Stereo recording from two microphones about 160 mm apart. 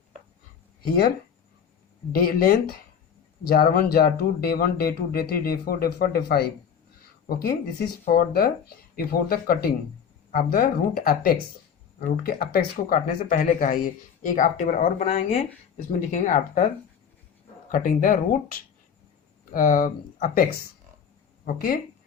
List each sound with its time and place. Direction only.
0.8 s speech: 75° left (ahead or behind)
2.1 s speech: 70° left (ahead or behind); by 15.4 s 40° left (ahead or behind)
15.9 s speech: 55° left (ahead or behind)
17.7 s speech: 55° left (ahead or behind)
21.4 s speech: 65° left (ahead or behind)